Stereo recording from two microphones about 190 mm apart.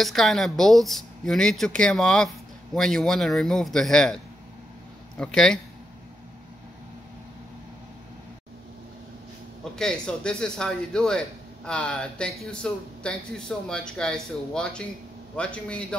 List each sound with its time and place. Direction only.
0.0 s a man's voice: centre (ahead or behind)
9.8 s a man's voice: 5° left (ahead or behind)